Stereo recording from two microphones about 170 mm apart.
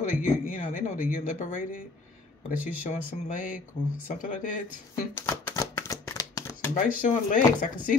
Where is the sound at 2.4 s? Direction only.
50° left (ahead or behind).